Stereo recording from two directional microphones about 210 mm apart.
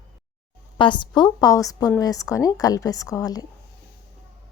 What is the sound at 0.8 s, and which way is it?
A woman's voice, 20° left (ahead or behind).